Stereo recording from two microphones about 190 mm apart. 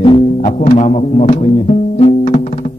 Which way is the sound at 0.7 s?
35° left (ahead or behind).